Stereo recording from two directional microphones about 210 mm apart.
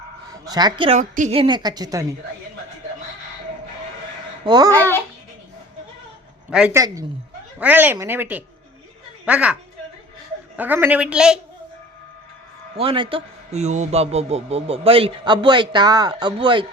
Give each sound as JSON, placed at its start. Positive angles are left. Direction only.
{"t": 0.4, "sound": "a man's voice", "side_deg": -20}
{"t": 4.4, "sound": "a man's voice", "side_deg": -20}
{"t": 4.7, "sound": "a child's voice", "side_deg": 10}
{"t": 6.5, "sound": "a woman's voice", "side_deg": -5}
{"t": 6.7, "sound": "a woman's voice", "side_deg": -15}
{"t": 10.6, "sound": "speech", "side_deg": -10}
{"t": 12.7, "sound": "a man's voice", "side_deg": -25}